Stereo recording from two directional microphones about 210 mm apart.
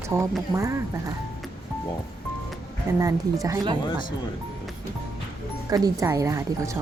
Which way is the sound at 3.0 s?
15° right (ahead or behind).